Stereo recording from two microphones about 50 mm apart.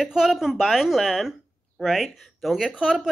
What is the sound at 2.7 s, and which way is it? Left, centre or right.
Speech, centre.